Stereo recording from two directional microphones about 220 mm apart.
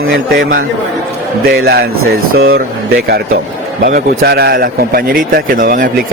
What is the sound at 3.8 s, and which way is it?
A man's voice, 45° right (ahead or behind).